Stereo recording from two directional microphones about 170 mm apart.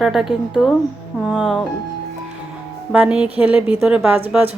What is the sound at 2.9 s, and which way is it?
A woman's voice, 5° right (ahead or behind).